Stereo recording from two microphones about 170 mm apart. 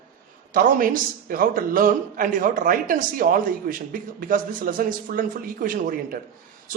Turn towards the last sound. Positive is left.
turn(degrees=-55)  # may be behind; listen again after turning